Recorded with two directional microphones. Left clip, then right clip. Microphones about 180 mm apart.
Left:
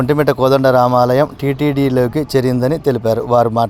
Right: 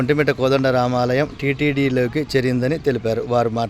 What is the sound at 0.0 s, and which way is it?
Speech, 15° left (ahead or behind).